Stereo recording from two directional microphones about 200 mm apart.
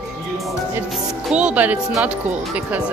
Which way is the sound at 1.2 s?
5° right (ahead or behind).